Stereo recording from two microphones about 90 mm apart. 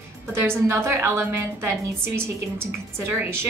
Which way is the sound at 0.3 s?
30° right (ahead or behind).